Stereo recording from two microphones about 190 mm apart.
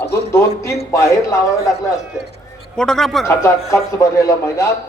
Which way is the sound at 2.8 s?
5° left (ahead or behind).